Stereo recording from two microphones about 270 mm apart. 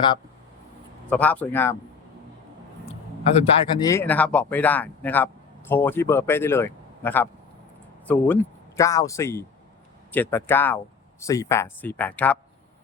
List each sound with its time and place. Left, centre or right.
1.1 s a man's voice: centre
3.3 s speech: centre